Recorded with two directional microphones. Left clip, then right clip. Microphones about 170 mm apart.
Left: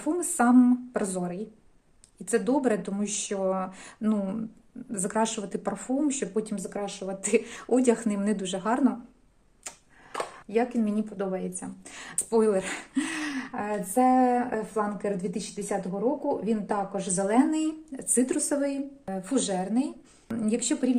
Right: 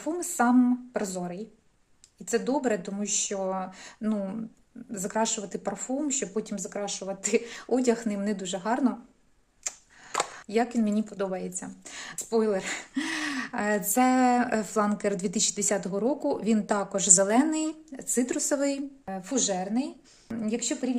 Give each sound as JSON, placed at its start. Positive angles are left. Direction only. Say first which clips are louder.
{"t": 0.0, "sound": "speech", "louder": "left 1 dB", "side_deg": -15}
{"t": 10.4, "sound": "speech", "louder": "left 3 dB", "side_deg": -40}
{"t": 13.5, "sound": "a woman's voice", "louder": "right 4 dB", "side_deg": -60}
{"t": 17.5, "sound": "speech", "louder": "left 1 dB", "side_deg": -25}
{"t": 18.4, "sound": "a woman's voice", "louder": "right 1 dB", "side_deg": -40}
{"t": 19.0, "sound": "speech", "louder": "even", "side_deg": -20}